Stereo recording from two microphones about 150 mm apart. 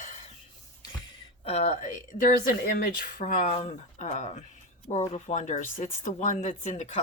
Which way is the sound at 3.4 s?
45° left (ahead or behind).